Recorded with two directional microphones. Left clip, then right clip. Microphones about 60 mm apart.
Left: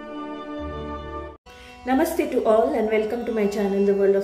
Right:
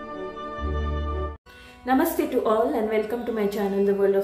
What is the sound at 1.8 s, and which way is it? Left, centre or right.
A woman's voice, centre.